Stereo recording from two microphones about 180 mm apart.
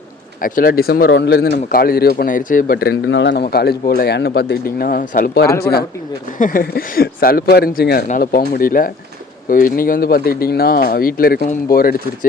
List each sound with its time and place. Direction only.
0.4 s speech: 50° left (ahead or behind)